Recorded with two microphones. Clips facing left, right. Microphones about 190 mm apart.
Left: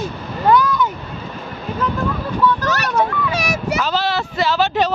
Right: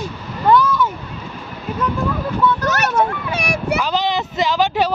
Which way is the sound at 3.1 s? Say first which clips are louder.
Left 2 dB; 55° right (ahead or behind).